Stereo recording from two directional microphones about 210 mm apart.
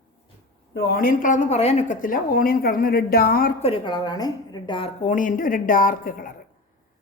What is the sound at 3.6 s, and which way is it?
A woman's voice, 25° left (ahead or behind).